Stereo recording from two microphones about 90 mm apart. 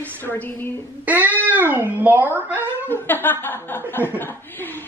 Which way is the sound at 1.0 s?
20° right (ahead or behind).